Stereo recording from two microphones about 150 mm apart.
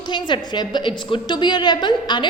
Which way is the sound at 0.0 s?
30° left (ahead or behind).